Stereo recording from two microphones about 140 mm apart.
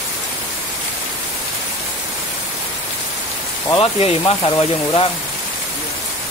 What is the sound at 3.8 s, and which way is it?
Speech, 40° left (ahead or behind).